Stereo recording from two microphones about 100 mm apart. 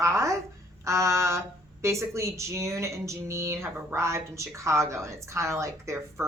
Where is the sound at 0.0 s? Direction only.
30° right (ahead or behind).